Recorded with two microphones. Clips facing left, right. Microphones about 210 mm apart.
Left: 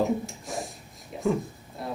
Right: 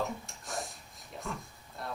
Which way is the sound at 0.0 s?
Centre (ahead or behind).